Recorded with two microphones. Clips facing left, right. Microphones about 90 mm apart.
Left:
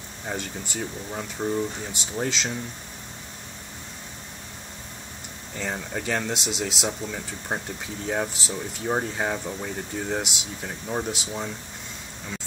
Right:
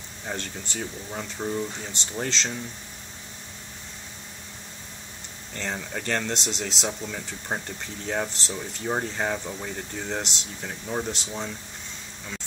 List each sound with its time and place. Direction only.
0.3 s speech: 5° left (ahead or behind)
5.5 s speech: 5° left (ahead or behind)